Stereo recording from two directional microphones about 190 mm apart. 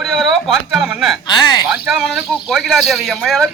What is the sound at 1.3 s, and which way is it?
Speech, 20° left (ahead or behind).